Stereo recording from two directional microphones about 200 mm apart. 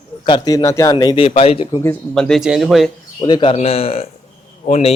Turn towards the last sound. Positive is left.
turn(degrees=35)  # may be behind; listen again after turning